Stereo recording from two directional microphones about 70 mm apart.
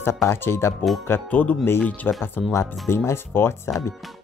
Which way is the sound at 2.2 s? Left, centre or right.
Left.